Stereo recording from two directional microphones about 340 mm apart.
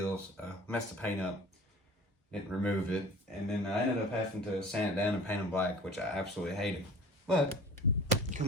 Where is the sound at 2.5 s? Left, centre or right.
Centre.